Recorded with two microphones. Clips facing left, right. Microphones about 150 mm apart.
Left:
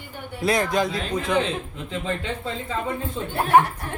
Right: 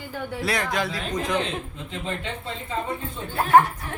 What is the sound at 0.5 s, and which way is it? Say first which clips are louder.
Speech: left 6 dB; 35° left (ahead or behind).